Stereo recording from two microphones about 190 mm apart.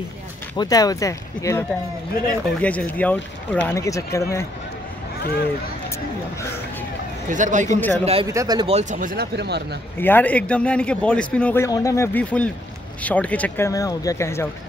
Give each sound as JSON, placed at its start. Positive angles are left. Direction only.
{"t": 0.6, "sound": "speech", "side_deg": 20}
{"t": 5.2, "sound": "speech", "side_deg": 55}
{"t": 7.2, "sound": "speech", "side_deg": -40}
{"t": 8.3, "sound": "speech", "side_deg": -20}
{"t": 8.7, "sound": "speech", "side_deg": -40}
{"t": 9.9, "sound": "speech", "side_deg": 10}